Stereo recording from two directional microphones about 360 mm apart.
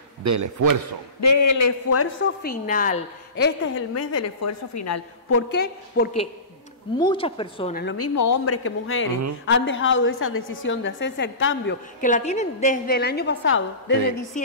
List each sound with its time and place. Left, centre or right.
0.2 s a man's voice: right
1.2 s a woman's voice: left
3.9 s a woman's voice: left
5.5 s a woman's voice: left
7.0 s a woman's voice: centre
7.8 s a woman's voice: left
8.2 s a woman's voice: left
8.6 s a woman's voice: left
14.3 s a woman's voice: left